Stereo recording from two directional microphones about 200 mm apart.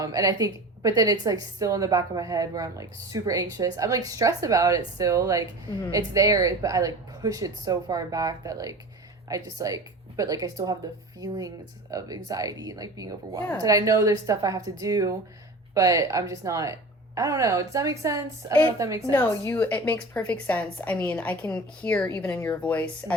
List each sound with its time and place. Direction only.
0.0 s a woman's voice: 15° right (ahead or behind)
19.1 s a woman's voice: 10° left (ahead or behind)